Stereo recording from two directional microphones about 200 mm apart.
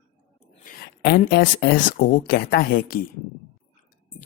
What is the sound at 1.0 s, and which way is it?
Speech, 55° left (ahead or behind).